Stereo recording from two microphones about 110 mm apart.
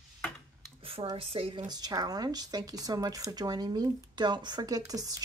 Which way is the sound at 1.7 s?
35° right (ahead or behind).